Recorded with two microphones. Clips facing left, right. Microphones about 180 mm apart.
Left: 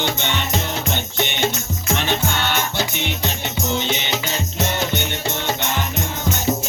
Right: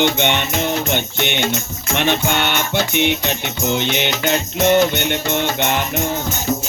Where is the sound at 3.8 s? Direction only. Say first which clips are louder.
Right 3 dB; 65° right (ahead or behind).